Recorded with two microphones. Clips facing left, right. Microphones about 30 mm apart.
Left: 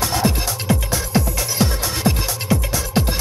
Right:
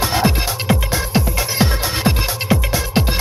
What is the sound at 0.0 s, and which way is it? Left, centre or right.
Music, right.